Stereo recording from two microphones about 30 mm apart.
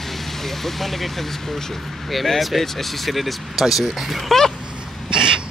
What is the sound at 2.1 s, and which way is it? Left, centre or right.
Speech, centre.